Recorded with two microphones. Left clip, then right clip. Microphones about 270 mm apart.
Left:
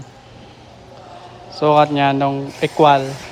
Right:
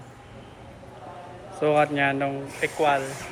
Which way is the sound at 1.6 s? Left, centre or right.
Centre.